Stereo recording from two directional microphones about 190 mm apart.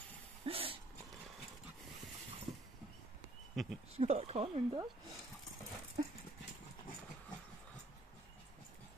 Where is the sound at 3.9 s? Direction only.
30° right (ahead or behind).